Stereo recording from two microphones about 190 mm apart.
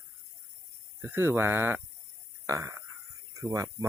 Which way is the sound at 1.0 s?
10° right (ahead or behind).